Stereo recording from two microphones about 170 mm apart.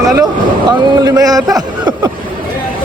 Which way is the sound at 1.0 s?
20° right (ahead or behind).